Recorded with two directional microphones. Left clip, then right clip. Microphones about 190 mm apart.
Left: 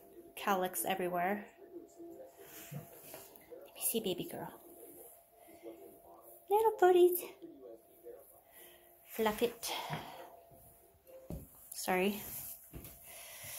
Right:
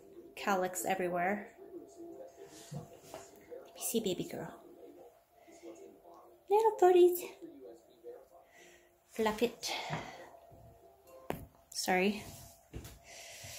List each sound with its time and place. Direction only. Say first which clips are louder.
0.3 s a woman's voice: right 1 dB; 10° right (ahead or behind)
3.6 s a woman's voice: right 2 dB; 15° right (ahead or behind)
6.4 s a woman's voice: right 1 dB; 5° right (ahead or behind)
9.1 s a woman's voice: right 1 dB; 5° right (ahead or behind)
11.7 s speech: right 2 dB; 15° right (ahead or behind)
13.1 s snort: right 2 dB; 15° right (ahead or behind)